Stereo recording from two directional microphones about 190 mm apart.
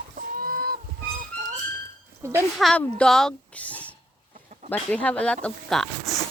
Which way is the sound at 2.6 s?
Centre (ahead or behind).